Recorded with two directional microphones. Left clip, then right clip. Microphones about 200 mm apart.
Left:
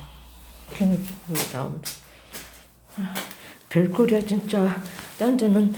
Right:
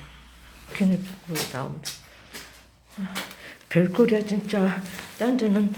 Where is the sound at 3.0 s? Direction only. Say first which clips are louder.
Left 3 dB; 15° left (ahead or behind).